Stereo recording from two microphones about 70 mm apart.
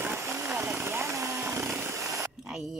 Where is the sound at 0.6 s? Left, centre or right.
Right.